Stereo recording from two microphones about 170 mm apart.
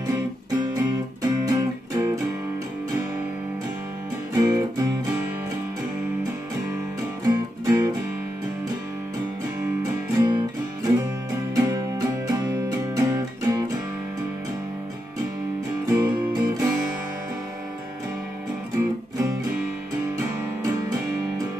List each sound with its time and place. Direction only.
0.6 s music: 25° right (ahead or behind)
4.4 s music: 20° right (ahead or behind)
7.2 s music: 20° right (ahead or behind)
10.2 s music: 25° right (ahead or behind)
15.9 s music: 20° right (ahead or behind)